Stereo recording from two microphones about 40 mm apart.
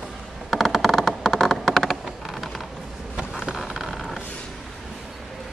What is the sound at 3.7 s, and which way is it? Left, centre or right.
Vehicle, centre.